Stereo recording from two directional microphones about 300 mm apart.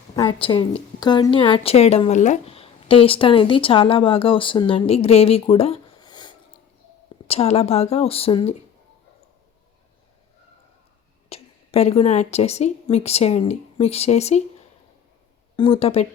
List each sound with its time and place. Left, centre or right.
0.2 s a woman's voice: centre
11.3 s a woman's voice: left
15.5 s speech: centre